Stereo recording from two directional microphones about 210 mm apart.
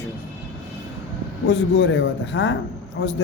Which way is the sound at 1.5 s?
60° left (ahead or behind).